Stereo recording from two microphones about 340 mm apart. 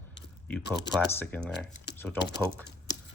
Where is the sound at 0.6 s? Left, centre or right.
Left.